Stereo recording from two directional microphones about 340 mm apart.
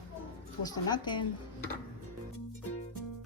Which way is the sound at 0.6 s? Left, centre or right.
Centre.